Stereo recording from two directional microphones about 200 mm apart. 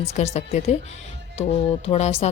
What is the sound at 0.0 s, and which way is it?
A woman's voice, 35° left (ahead or behind).